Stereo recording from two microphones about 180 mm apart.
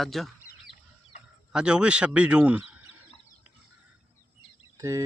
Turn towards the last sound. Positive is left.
turn(degrees=-15)  # may be behind; listen again after turning